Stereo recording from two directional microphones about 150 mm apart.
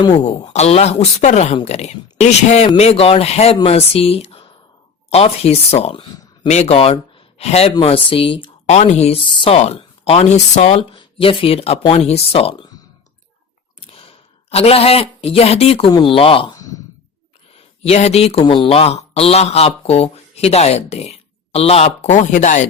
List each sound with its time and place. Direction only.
0.0 s speech: 30° left (ahead or behind)
0.4 s speech: 50° left (ahead or behind)
6.5 s speech: 45° left (ahead or behind)
8.6 s speech: 50° left (ahead or behind)
13.8 s speech: 40° left (ahead or behind)
17.8 s speech: 45° left (ahead or behind)